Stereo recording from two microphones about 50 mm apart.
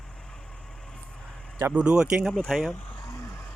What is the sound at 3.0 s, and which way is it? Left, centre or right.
Music, left.